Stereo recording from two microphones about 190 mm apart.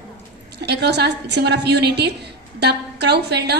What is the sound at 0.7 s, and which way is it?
A woman's voice, 60° right (ahead or behind).